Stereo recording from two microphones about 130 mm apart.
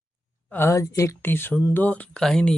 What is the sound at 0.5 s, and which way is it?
Speech, 20° left (ahead or behind).